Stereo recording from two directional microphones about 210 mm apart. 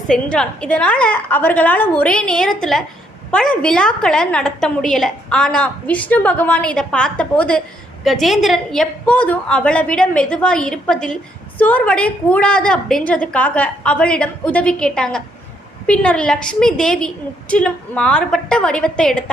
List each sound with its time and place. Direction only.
0.1 s a woman's voice: 5° left (ahead or behind)